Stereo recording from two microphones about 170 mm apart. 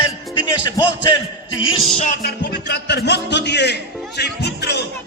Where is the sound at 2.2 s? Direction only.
80° left.